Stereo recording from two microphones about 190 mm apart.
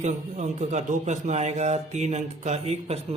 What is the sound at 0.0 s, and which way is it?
Speech, 40° right (ahead or behind).